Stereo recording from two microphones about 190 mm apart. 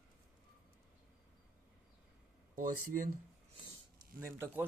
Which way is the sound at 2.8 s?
45° right (ahead or behind).